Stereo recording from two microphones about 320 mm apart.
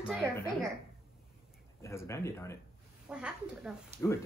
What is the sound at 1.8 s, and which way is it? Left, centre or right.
Speech, centre.